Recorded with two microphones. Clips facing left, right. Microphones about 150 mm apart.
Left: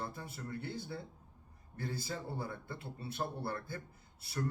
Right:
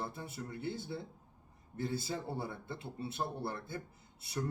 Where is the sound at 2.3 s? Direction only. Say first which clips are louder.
Right 1 dB; 20° right (ahead or behind).